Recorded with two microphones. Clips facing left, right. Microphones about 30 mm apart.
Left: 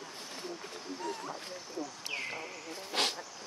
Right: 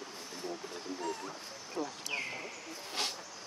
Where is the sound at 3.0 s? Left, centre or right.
Left.